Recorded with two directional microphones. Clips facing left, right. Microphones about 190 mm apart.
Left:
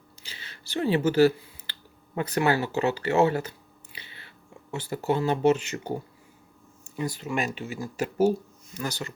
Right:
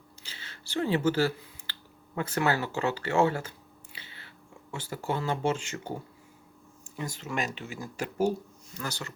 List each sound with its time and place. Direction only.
0.2 s a sound: 15° left (ahead or behind)
0.7 s speech: 15° left (ahead or behind)
4.7 s speech: 20° left (ahead or behind)
7.2 s speech: 15° left (ahead or behind)